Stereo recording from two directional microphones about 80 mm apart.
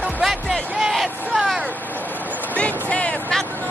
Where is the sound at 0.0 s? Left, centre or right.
Centre.